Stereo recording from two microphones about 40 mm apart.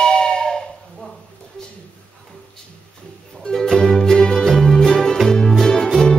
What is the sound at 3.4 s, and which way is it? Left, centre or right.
Music, centre.